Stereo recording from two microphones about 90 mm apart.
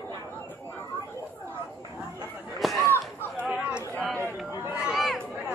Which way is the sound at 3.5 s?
10° right (ahead or behind).